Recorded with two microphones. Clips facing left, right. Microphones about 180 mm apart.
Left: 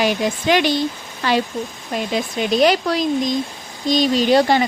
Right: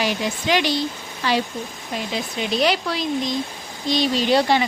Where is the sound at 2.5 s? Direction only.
45° left (ahead or behind).